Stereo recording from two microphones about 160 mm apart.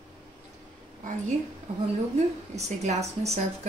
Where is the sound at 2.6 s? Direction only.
45° right (ahead or behind).